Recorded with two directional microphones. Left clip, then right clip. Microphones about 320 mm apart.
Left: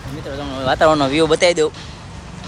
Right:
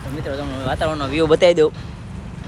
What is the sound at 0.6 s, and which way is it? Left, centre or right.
Speech, left.